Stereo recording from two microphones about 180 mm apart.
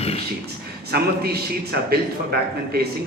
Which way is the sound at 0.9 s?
60° right (ahead or behind).